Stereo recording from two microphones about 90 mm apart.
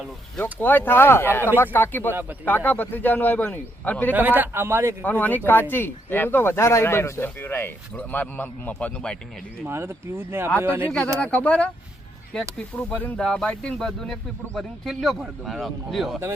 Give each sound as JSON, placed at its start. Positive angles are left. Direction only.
{"t": 0.6, "sound": "speech", "side_deg": 20}
{"t": 4.1, "sound": "a man's voice", "side_deg": -20}
{"t": 5.0, "sound": "speech", "side_deg": 20}
{"t": 9.6, "sound": "a man's voice", "side_deg": -25}
{"t": 11.2, "sound": "a man's voice", "side_deg": 15}